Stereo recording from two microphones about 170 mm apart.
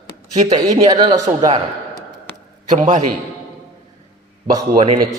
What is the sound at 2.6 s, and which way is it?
Speech, 45° right (ahead or behind).